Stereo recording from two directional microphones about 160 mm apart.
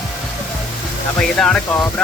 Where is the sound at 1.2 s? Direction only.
5° left (ahead or behind).